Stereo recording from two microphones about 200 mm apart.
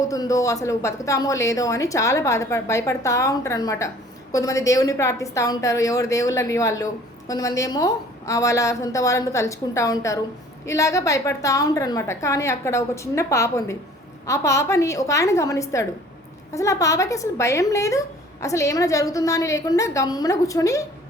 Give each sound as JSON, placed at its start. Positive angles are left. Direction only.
{"t": 0.1, "sound": "a woman's voice", "side_deg": 15}